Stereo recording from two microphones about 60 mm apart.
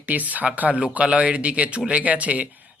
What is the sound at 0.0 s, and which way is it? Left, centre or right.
Speech, right.